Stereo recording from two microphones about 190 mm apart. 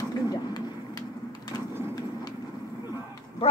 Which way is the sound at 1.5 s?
20° left (ahead or behind).